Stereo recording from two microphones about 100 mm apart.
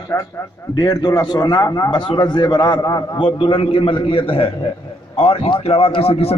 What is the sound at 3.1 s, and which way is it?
A man's voice, 60° left (ahead or behind).